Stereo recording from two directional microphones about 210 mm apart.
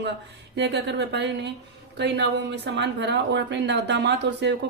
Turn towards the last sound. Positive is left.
turn(degrees=-55)  # may be behind; listen again after turning